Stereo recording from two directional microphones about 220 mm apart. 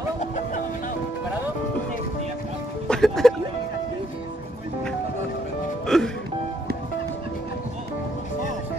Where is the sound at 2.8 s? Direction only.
Centre (ahead or behind).